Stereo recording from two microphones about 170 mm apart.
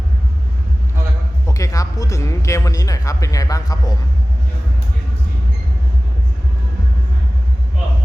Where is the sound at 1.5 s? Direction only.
20° left (ahead or behind).